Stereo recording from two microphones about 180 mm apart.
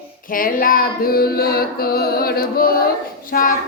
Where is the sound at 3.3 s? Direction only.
50° left (ahead or behind).